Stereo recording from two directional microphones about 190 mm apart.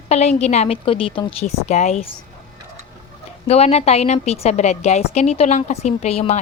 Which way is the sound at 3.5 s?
35° left (ahead or behind).